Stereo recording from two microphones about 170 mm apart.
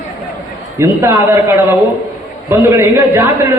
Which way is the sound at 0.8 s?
15° right (ahead or behind).